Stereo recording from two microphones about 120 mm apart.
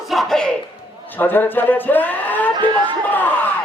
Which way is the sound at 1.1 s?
15° left (ahead or behind).